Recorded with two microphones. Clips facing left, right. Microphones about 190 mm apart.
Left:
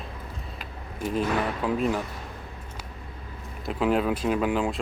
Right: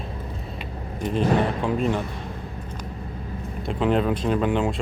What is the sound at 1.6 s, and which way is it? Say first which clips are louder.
Speech: right 2 dB; 5° left (ahead or behind).